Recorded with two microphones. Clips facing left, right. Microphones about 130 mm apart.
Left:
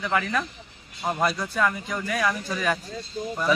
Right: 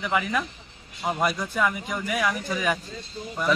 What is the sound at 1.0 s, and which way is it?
Speech, centre (ahead or behind).